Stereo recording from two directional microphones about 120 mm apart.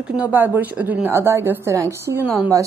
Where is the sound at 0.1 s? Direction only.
15° right (ahead or behind).